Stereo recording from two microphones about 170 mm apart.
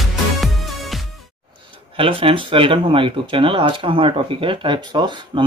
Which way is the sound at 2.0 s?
30° right (ahead or behind).